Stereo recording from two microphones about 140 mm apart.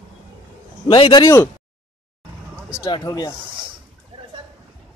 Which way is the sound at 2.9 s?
30° left (ahead or behind).